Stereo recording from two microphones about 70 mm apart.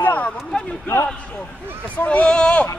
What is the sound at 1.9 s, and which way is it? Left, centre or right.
Speech, left.